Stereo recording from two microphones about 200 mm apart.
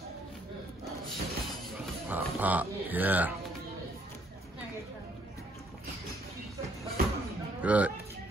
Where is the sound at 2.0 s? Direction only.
10° right (ahead or behind).